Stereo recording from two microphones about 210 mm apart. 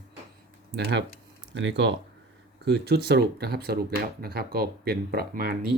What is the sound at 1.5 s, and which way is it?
Speech, 60° right (ahead or behind).